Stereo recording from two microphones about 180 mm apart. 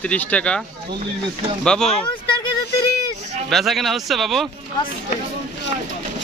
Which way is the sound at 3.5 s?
Centre (ahead or behind).